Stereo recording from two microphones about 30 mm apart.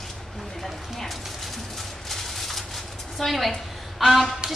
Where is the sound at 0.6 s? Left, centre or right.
Centre.